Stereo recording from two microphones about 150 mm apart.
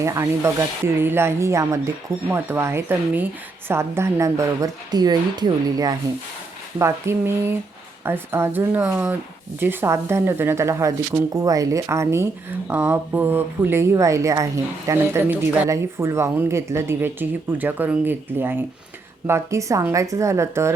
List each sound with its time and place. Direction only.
0.0 s a woman's voice: 20° right (ahead or behind)